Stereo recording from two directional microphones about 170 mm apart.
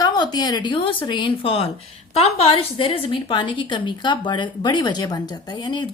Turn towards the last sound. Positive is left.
turn(degrees=25)  # may be behind; listen again after turning